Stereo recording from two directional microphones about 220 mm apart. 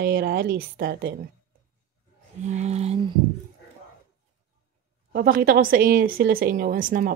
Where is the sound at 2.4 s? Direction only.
30° right (ahead or behind).